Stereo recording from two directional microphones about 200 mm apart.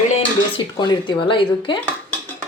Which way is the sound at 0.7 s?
25° left (ahead or behind).